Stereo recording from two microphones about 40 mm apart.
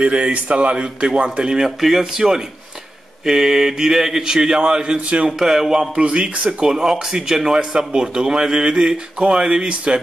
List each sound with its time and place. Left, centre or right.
0.0 s a man's voice: right
1.8 s a man's voice: centre; by 5.3 s right
5.4 s speech: centre
5.9 s a man's voice: right
6.7 s a man's voice: centre